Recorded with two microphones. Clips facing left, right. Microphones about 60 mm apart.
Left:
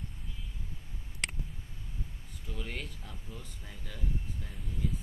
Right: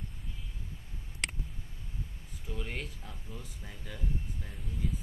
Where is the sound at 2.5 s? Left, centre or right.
Centre.